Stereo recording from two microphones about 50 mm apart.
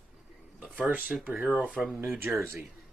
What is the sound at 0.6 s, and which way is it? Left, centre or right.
Speech, right.